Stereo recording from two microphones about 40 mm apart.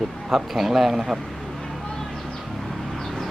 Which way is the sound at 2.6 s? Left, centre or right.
Centre.